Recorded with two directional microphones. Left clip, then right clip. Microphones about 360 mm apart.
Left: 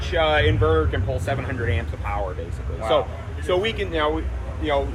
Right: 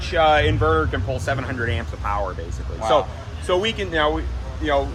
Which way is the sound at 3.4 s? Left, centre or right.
Right.